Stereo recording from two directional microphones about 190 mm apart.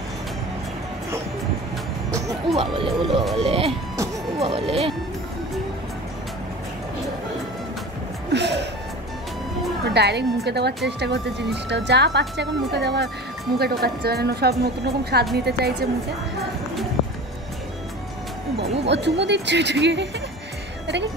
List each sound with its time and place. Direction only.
2.5 s speech: 30° right (ahead or behind)
4.4 s music: 30° right (ahead or behind)
8.3 s music: 65° right (ahead or behind)
9.9 s a woman's voice: 60° right (ahead or behind)
18.9 s a woman's voice: 65° right (ahead or behind)